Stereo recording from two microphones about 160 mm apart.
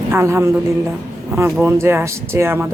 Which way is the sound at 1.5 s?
15° right (ahead or behind).